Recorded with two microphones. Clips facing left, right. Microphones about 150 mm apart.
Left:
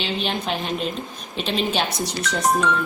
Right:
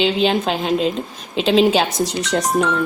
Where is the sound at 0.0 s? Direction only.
90° right.